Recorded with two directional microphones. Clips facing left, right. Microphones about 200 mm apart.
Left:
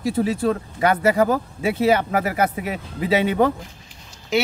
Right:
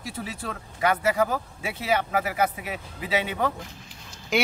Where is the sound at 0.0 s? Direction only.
30° left (ahead or behind).